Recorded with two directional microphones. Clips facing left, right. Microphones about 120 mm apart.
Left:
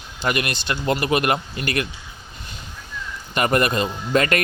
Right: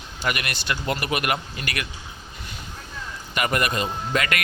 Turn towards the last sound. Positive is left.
turn(degrees=35)  # may be behind; listen again after turning